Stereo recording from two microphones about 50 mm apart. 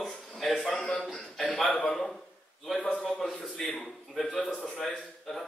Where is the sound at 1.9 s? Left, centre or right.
Centre.